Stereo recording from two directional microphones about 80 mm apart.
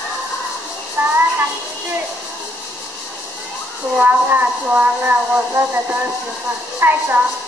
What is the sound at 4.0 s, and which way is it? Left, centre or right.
Speech, right.